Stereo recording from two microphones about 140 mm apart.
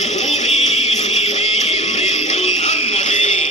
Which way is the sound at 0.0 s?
55° left (ahead or behind).